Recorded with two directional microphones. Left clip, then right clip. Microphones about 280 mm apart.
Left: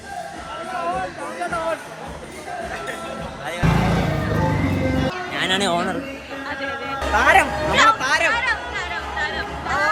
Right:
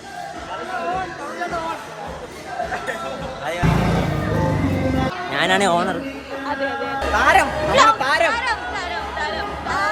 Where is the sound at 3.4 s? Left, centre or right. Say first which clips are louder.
Right 1 dB; centre.